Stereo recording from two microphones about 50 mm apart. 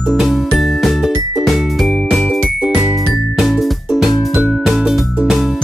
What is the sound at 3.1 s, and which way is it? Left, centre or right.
Music, centre.